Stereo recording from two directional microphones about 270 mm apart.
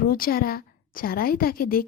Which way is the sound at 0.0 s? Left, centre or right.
Left.